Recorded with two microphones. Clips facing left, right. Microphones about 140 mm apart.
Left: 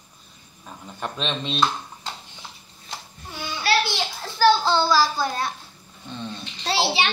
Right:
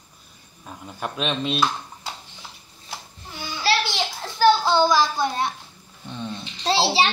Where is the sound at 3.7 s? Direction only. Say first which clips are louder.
Even; 25° right (ahead or behind).